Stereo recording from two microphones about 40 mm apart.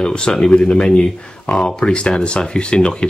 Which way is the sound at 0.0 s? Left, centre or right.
Left.